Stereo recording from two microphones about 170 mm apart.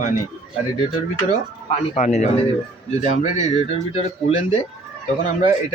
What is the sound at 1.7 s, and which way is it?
Speech, 40° left (ahead or behind).